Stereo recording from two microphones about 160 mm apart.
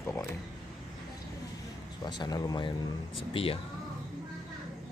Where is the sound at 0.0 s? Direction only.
20° left (ahead or behind).